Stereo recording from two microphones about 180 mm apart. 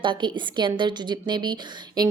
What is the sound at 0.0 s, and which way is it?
A woman's voice, 25° right (ahead or behind).